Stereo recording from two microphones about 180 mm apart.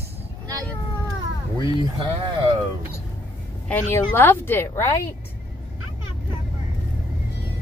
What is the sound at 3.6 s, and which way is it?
A woman's voice, 10° left (ahead or behind).